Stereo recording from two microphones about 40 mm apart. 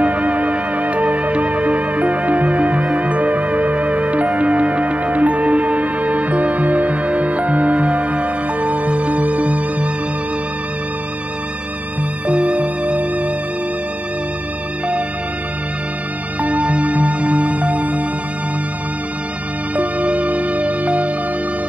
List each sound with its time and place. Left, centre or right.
0.0 s music: right
12.3 s music: right
16.3 s music: right
19.7 s music: right